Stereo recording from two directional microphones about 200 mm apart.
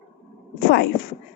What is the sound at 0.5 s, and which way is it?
Speech, 55° left (ahead or behind).